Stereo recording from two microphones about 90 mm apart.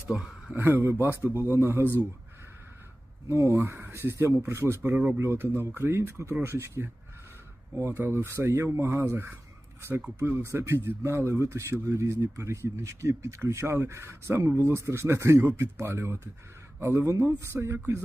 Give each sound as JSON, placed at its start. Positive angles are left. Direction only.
{"t": 0.1, "sound": "speech", "side_deg": -10}
{"t": 0.5, "sound": "speech", "side_deg": -25}
{"t": 3.2, "sound": "speech", "side_deg": -35}